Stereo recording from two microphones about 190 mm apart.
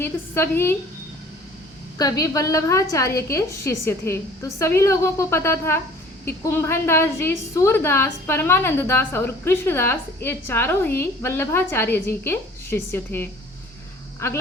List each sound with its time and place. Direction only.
0.0 s a woman's voice: 10° left (ahead or behind)
2.0 s a woman's voice: 20° left (ahead or behind)